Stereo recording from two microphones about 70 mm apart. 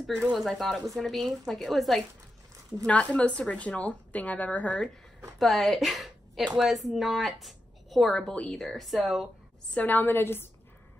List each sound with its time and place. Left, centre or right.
0.4 s speech: centre
2.9 s a woman's voice: centre
5.4 s a woman's voice: centre
6.4 s a woman's voice: centre
8.1 s a woman's voice: centre
8.6 s speech: centre
9.8 s a woman's voice: left